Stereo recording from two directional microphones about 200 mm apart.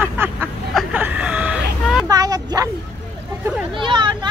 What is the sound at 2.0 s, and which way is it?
Speech, 20° right (ahead or behind).